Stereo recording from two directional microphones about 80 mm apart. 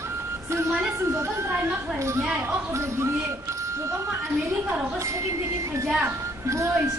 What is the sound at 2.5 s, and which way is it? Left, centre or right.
Speech, right.